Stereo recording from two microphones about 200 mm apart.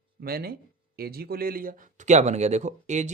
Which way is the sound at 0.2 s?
50° right (ahead or behind).